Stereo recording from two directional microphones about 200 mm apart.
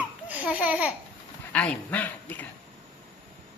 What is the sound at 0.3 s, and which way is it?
Speech, 5° right (ahead or behind).